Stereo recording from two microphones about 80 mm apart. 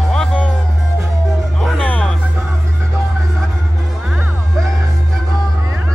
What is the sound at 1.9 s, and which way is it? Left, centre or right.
Music, centre.